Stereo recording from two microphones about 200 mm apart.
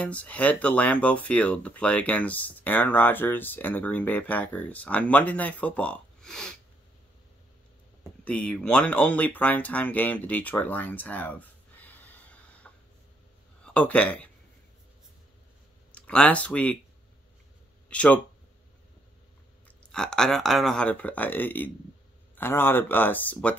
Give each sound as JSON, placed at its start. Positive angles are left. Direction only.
{"t": 0.0, "sound": "speech", "side_deg": 5}
{"t": 8.2, "sound": "speech", "side_deg": 5}
{"t": 13.7, "sound": "speech", "side_deg": 5}
{"t": 15.9, "sound": "speech", "side_deg": 5}
{"t": 17.8, "sound": "speech", "side_deg": 5}
{"t": 19.8, "sound": "speech", "side_deg": 5}